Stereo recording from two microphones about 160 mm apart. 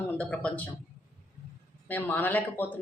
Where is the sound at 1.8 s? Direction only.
10° left (ahead or behind).